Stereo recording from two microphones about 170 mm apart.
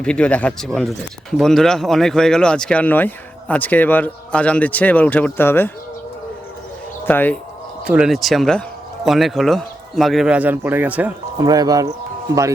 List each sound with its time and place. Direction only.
0.0 s speech: 5° left (ahead or behind)
7.0 s speech: 10° left (ahead or behind)
7.9 s speech: 5° right (ahead or behind)
11.3 s speech: 20° right (ahead or behind)